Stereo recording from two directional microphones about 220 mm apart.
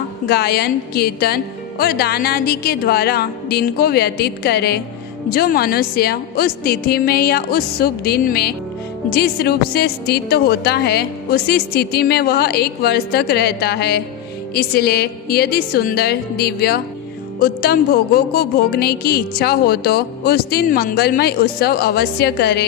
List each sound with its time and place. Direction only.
0.3 s speech: 45° left (ahead or behind)